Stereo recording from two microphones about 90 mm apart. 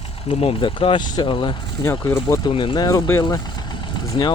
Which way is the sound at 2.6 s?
65° left (ahead or behind).